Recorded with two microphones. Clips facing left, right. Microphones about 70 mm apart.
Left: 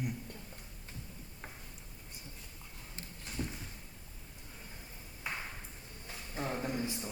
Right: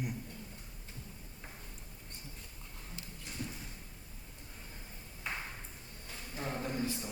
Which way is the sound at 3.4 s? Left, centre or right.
Left.